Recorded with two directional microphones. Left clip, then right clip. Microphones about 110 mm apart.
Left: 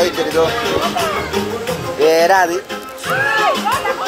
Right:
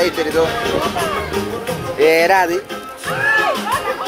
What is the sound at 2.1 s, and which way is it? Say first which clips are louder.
Speech: left 1 dB; 45° right (ahead or behind).